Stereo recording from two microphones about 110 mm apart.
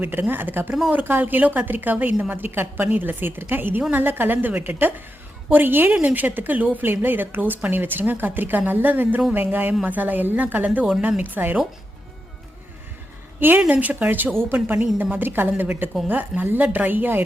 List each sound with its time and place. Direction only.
0.0 s a woman's voice: 20° right (ahead or behind)
13.4 s a woman's voice: 15° right (ahead or behind)